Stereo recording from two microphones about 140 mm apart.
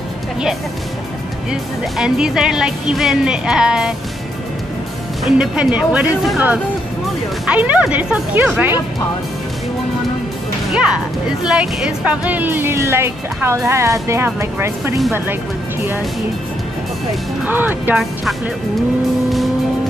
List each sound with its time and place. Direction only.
1.5 s speech: 5° right (ahead or behind)
5.2 s speech: 5° right (ahead or behind)
10.7 s speech: 5° right (ahead or behind)
17.5 s speech: 15° right (ahead or behind)